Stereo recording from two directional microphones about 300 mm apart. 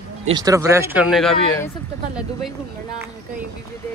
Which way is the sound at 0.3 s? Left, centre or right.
Centre.